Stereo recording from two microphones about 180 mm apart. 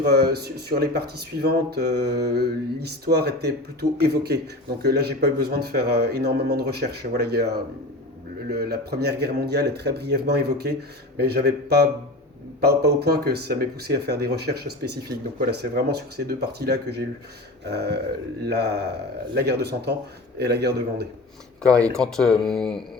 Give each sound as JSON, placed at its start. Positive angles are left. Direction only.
{"t": 0.0, "sound": "speech", "side_deg": -65}
{"t": 21.8, "sound": "speech", "side_deg": 5}